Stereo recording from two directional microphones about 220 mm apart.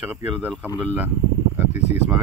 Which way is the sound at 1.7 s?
30° left (ahead or behind).